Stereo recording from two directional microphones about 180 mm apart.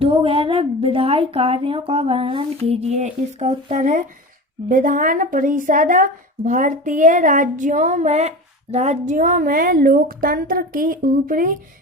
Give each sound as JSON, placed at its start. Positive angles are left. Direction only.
{"t": 0.0, "sound": "a woman's voice", "side_deg": -30}